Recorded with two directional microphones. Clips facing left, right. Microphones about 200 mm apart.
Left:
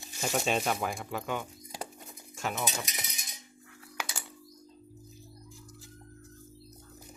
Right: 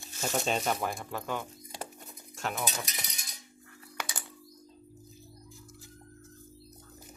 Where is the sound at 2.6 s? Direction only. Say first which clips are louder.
Left 1 dB; 20° left (ahead or behind).